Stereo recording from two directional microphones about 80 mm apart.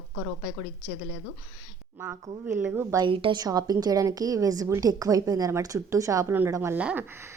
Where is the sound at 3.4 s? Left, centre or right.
Right.